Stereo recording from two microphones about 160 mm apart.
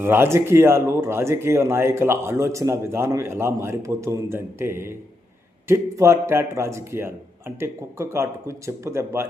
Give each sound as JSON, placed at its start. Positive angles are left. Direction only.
{"t": 0.0, "sound": "speech", "side_deg": -15}